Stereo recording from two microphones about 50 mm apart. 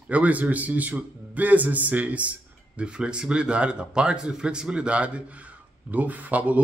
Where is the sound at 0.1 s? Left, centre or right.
Right.